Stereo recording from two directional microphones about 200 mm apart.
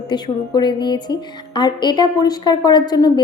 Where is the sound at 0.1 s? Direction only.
20° left (ahead or behind).